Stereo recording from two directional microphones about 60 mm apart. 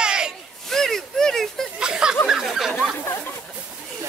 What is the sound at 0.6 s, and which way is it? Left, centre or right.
Speech, centre.